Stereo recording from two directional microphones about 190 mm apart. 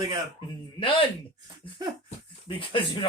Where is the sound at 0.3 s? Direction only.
25° left (ahead or behind).